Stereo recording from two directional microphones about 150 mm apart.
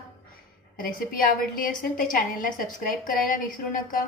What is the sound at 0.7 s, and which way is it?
A woman's voice, 70° left (ahead or behind).